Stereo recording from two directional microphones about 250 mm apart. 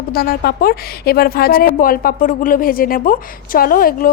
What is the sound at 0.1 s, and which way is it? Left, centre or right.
A woman's voice, left.